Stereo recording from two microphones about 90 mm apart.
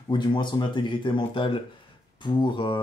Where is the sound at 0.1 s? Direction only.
60° left (ahead or behind).